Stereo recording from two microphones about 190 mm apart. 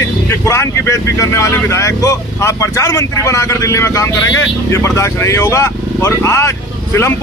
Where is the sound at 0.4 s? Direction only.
15° left (ahead or behind).